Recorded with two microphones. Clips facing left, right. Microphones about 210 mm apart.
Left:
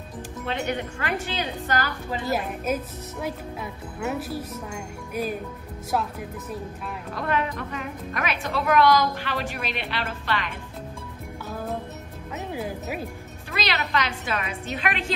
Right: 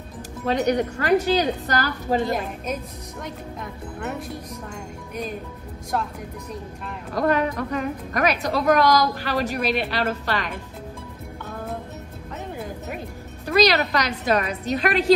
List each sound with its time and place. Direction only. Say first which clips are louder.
0.5 s a woman's voice: right 8 dB; 40° right (ahead or behind)
2.2 s speech: even; 5° left (ahead or behind)
7.2 s a woman's voice: right 6 dB; 40° right (ahead or behind)
12.5 s music: left 3 dB; 5° left (ahead or behind)
13.5 s a woman's voice: right 9 dB; 40° right (ahead or behind)